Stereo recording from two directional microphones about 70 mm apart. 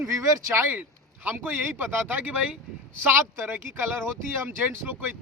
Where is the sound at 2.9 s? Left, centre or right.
Right.